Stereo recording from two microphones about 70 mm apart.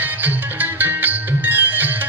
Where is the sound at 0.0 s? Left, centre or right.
Right.